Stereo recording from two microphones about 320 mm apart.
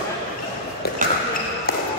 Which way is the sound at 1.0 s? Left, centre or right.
Right.